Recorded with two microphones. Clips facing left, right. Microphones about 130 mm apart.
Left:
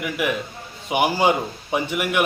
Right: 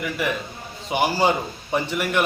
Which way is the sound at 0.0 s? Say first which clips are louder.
Left 1 dB; 10° left (ahead or behind).